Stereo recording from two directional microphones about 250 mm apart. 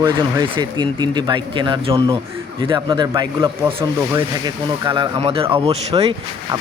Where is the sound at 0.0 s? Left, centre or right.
Centre.